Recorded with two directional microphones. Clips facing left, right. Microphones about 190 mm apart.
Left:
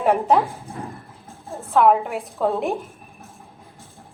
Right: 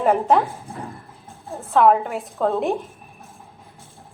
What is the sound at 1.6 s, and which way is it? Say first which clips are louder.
A woman's voice: even; centre (ahead or behind).